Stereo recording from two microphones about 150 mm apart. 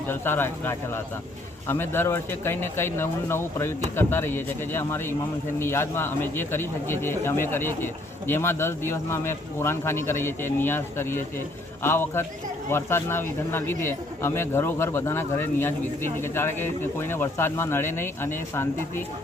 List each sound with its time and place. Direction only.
0.1 s speech: 15° left (ahead or behind)